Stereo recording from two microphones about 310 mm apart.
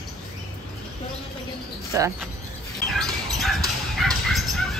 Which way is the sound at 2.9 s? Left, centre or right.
Centre.